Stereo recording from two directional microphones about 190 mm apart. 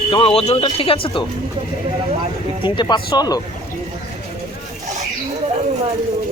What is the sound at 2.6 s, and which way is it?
Speech, 25° left (ahead or behind).